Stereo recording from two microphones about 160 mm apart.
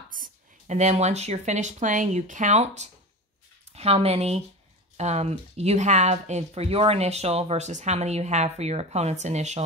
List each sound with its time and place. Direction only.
0.1 s speech: 55° right (ahead or behind)